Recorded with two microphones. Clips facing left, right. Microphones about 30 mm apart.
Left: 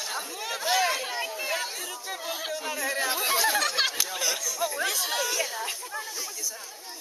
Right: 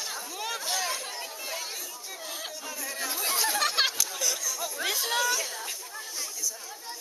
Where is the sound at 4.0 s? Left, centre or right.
Left.